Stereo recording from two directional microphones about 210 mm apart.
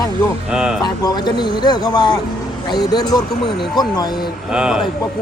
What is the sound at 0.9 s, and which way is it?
Speech, 20° left (ahead or behind).